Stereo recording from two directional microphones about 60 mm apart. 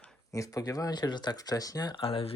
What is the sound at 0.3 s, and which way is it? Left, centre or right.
Speech, left.